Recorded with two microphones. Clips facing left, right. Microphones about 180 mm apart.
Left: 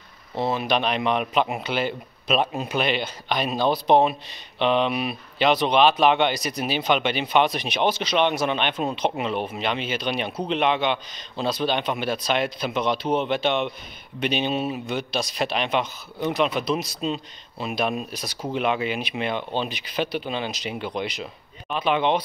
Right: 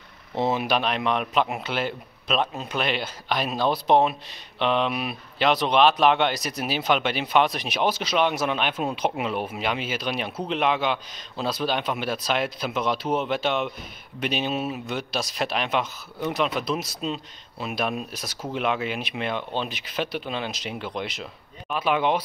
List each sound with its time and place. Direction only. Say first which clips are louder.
0.4 s a sound: right 1 dB; 20° right (ahead or behind)
0.7 s speech: left 1 dB; centre (ahead or behind)
2.8 s speech: left 1 dB; centre (ahead or behind)